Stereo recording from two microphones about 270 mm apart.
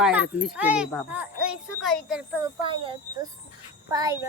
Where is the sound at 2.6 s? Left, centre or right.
Centre.